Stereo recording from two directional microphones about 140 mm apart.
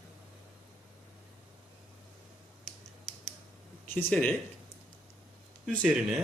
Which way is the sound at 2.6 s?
Centre (ahead or behind).